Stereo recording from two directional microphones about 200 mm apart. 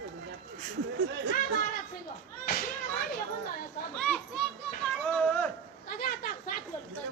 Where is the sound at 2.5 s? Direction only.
45° left (ahead or behind).